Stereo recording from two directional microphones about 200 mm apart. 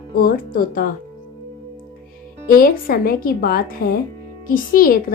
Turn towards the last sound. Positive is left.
turn(degrees=45)  # may be behind; listen again after turning